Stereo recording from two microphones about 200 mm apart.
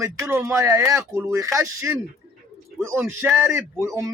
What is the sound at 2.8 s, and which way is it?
Speech, 15° right (ahead or behind).